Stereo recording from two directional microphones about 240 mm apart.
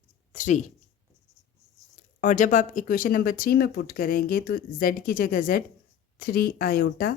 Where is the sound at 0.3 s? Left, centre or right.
Left.